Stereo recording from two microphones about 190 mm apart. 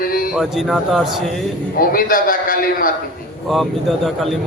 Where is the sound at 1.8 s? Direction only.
50° left (ahead or behind).